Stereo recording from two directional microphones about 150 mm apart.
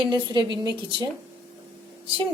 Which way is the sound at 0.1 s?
30° right (ahead or behind).